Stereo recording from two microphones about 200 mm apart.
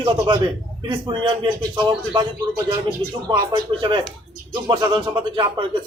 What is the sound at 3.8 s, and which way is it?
Speech, 25° right (ahead or behind).